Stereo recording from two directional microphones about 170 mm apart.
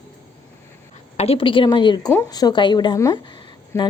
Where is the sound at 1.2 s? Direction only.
35° left (ahead or behind).